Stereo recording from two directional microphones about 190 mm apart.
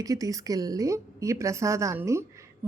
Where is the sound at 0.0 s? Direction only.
20° right (ahead or behind).